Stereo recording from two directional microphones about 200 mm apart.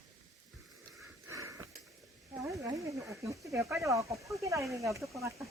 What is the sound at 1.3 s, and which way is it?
Sniff, 15° right (ahead or behind).